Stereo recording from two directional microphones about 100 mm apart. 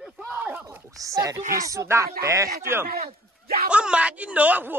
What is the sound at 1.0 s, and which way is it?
Speech, 35° right (ahead or behind).